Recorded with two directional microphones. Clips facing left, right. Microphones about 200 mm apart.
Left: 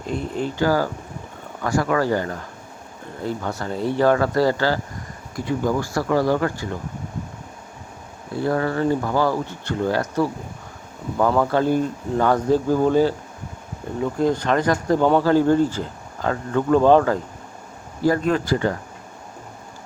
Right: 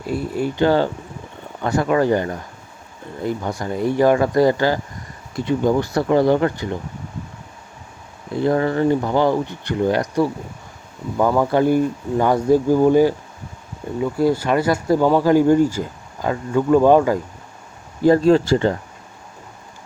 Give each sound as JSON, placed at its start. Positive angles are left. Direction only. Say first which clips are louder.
{"t": 0.0, "sound": "speech", "louder": "right 3 dB", "side_deg": -5}
{"t": 0.6, "sound": "speech", "louder": "right 4 dB", "side_deg": -25}
{"t": 8.3, "sound": "speech", "louder": "right 4 dB", "side_deg": -20}
{"t": 11.3, "sound": "speech", "louder": "right 4 dB", "side_deg": -15}
{"t": 18.0, "sound": "speech", "louder": "right 6 dB", "side_deg": -30}